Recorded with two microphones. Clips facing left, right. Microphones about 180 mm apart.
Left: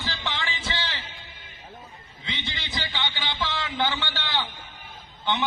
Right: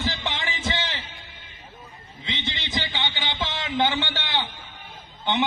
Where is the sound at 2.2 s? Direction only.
20° right (ahead or behind).